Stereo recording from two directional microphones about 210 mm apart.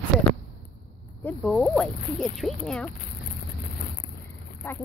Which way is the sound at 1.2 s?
5° left (ahead or behind).